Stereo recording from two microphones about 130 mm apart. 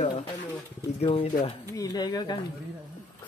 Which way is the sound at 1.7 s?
30° left (ahead or behind).